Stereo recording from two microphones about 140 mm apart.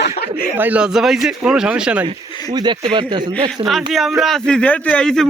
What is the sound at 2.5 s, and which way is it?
Speech, 35° right (ahead or behind).